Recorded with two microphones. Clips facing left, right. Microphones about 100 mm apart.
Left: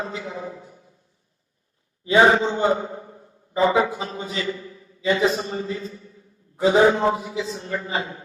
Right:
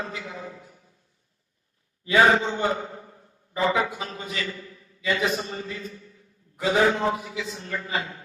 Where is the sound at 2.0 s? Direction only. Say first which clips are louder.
Left 3 dB; 25° left (ahead or behind).